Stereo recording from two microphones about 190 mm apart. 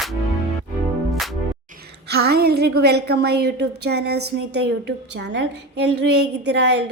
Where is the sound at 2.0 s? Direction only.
55° right (ahead or behind).